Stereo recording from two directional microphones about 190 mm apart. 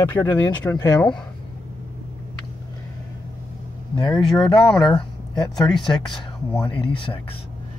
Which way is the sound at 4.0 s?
20° left (ahead or behind).